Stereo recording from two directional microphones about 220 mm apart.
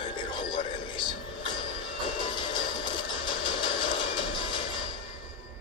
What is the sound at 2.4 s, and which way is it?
Train, 20° left (ahead or behind).